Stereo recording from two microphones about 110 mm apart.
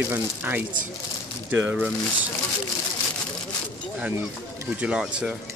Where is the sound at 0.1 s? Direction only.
15° right (ahead or behind).